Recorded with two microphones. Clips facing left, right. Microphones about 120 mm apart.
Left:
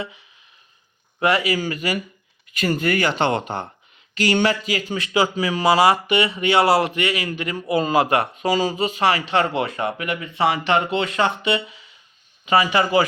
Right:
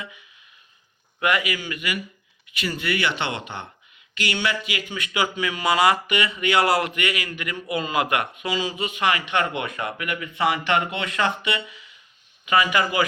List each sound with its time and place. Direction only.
0.0 s speech: 30° left (ahead or behind)